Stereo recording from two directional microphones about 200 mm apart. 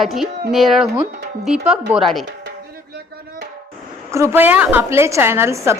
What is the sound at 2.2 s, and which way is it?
Music, 55° right (ahead or behind).